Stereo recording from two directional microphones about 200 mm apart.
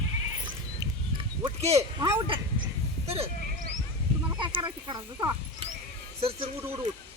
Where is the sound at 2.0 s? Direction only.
25° right (ahead or behind).